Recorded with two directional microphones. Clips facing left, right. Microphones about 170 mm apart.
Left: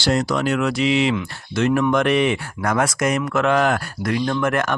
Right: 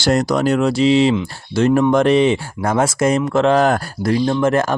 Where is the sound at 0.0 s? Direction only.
45° right (ahead or behind).